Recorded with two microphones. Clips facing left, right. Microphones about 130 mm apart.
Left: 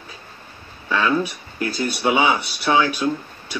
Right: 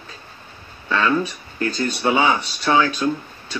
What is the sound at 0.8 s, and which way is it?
Speech, 10° left (ahead or behind).